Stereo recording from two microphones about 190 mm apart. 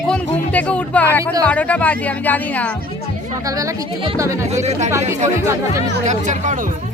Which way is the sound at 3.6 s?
15° right (ahead or behind).